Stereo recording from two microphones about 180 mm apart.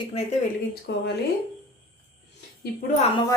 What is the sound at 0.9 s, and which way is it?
Speech, 65° left (ahead or behind).